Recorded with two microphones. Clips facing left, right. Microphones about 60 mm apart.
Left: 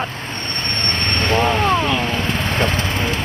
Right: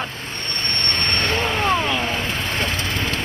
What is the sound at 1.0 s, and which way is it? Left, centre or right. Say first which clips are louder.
Vehicle: left 5 dB; centre.